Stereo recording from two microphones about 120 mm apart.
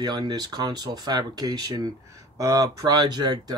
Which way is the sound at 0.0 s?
35° right (ahead or behind).